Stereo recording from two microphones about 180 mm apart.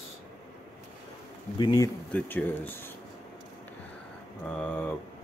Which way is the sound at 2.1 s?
10° left (ahead or behind).